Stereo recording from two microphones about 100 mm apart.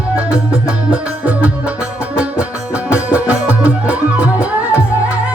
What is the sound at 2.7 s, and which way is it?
Music, 15° right (ahead or behind).